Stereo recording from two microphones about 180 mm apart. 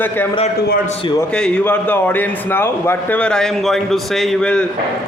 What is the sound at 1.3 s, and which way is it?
A man's voice, 5° left (ahead or behind).